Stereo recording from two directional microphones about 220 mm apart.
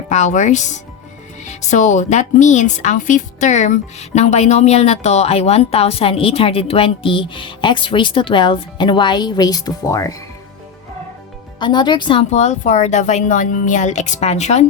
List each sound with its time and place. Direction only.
0.1 s a woman's voice: 35° left (ahead or behind); by 10.2 s 15° left (ahead or behind)
11.6 s a woman's voice: 20° left (ahead or behind)